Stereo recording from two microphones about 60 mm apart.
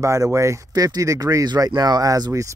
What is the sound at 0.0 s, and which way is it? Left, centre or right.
Speech, right.